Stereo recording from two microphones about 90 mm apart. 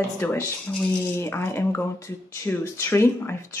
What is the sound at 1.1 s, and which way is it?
A woman's voice, 25° left (ahead or behind).